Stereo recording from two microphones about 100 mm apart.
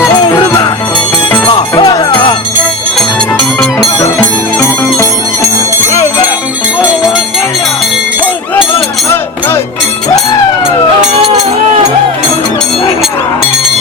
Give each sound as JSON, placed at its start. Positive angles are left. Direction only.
{"t": 1.8, "sound": "music", "side_deg": 45}
{"t": 3.0, "sound": "music", "side_deg": 5}